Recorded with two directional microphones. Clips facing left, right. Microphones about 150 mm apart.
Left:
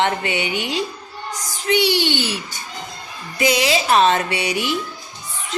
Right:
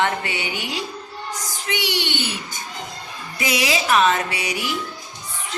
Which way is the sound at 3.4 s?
30° left (ahead or behind).